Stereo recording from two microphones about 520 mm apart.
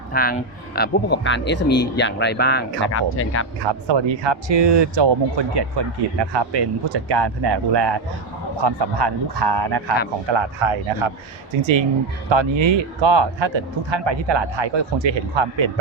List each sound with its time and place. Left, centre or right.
0.1 s speech: centre
3.6 s speech: right
10.2 s speech: right